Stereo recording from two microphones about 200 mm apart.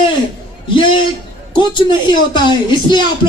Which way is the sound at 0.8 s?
25° left (ahead or behind).